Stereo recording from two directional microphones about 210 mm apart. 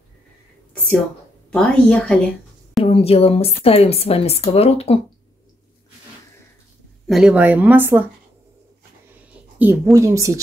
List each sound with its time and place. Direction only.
1.5 s a woman's voice: 5° left (ahead or behind)
2.8 s a woman's voice: 25° left (ahead or behind)
7.1 s speech: 5° right (ahead or behind)
9.6 s speech: 10° right (ahead or behind)